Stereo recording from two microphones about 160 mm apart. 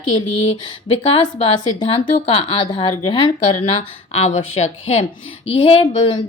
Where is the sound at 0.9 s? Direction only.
35° left (ahead or behind).